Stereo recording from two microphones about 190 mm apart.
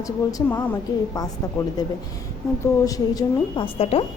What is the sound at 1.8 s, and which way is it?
A woman's voice, 20° left (ahead or behind).